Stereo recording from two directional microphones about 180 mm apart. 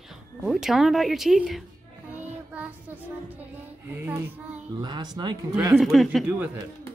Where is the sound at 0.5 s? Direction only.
Centre (ahead or behind).